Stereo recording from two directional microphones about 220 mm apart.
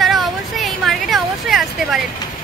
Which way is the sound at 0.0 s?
Centre (ahead or behind).